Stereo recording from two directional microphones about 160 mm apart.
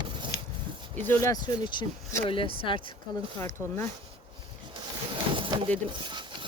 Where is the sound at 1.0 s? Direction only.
15° left (ahead or behind); by 2.9 s 30° left (ahead or behind).